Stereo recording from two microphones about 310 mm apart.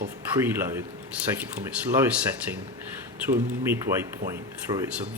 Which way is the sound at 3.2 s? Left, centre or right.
Centre.